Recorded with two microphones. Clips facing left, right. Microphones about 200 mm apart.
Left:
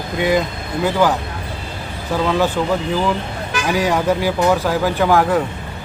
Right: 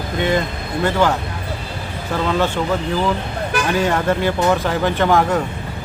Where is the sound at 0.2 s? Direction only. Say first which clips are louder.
Left 2 dB; 5° left (ahead or behind).